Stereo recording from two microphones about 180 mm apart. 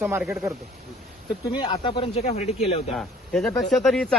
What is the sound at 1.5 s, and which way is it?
Speech, 25° left (ahead or behind).